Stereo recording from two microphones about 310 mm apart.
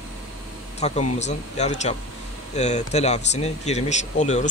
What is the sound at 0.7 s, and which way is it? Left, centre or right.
Speech, left.